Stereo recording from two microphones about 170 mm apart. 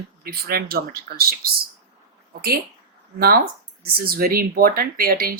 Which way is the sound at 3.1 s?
60° right (ahead or behind).